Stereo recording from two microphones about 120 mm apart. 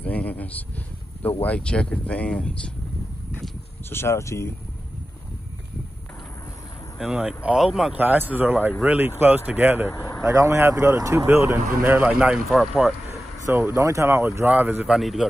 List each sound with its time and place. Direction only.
0.0 s a sound: 15° left (ahead or behind)
1.4 s speech: 10° left (ahead or behind)
3.9 s speech: 20° left (ahead or behind)
7.0 s speech: 5° right (ahead or behind)
8.0 s speech: 15° right (ahead or behind)
9.8 s speech: 15° left (ahead or behind)
10.2 s speech: 25° right (ahead or behind); by 12.9 s centre (ahead or behind)
13.1 s speech: 20° right (ahead or behind)
15.0 s speech: centre (ahead or behind)